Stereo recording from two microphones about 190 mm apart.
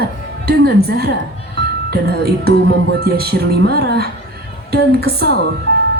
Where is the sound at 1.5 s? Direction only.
55° right (ahead or behind).